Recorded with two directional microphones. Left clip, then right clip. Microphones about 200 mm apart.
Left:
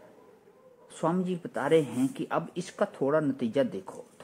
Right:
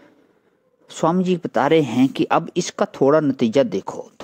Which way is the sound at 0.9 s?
40° right (ahead or behind).